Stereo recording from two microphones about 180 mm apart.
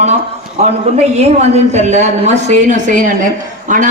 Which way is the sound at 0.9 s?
35° right (ahead or behind).